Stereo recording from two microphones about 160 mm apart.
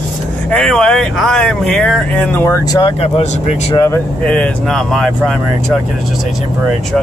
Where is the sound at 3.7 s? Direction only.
15° left (ahead or behind).